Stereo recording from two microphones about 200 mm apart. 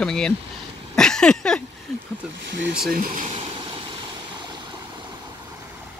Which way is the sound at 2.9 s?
45° right (ahead or behind).